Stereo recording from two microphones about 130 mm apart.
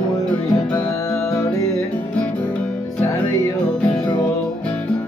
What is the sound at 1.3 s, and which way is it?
Music, 25° left (ahead or behind).